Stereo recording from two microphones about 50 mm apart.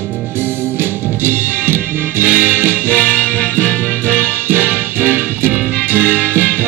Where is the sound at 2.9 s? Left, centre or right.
Left.